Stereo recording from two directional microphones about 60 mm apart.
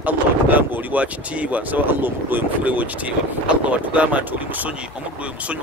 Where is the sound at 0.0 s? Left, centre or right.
Right.